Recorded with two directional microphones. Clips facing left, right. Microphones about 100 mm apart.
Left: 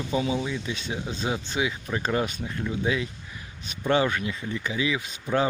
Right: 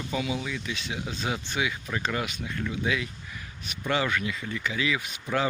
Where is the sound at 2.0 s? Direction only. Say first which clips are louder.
Left 5 dB; 35° left (ahead or behind); by 5.4 s 20° left (ahead or behind).